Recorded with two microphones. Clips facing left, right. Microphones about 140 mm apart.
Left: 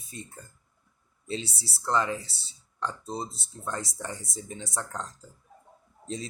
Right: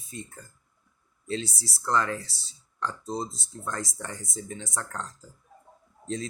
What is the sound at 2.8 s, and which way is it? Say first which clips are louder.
Speech: right 2 dB; 10° left (ahead or behind).